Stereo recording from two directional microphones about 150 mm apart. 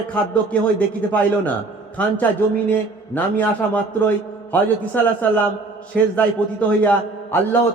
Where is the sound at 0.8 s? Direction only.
10° left (ahead or behind).